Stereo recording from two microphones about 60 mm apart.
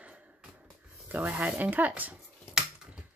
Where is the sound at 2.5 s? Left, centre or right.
Centre.